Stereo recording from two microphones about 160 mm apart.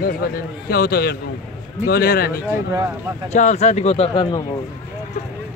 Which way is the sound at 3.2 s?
45° left (ahead or behind).